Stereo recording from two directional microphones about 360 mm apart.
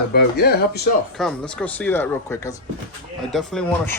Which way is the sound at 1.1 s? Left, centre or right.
Centre.